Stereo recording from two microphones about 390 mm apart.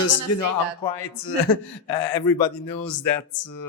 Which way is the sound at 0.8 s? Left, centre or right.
Left.